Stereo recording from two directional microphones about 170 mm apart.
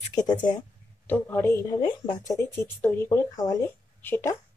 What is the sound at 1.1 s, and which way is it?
Speech, 10° left (ahead or behind).